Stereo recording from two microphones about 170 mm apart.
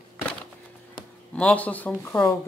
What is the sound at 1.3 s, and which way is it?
Speech, 5° left (ahead or behind).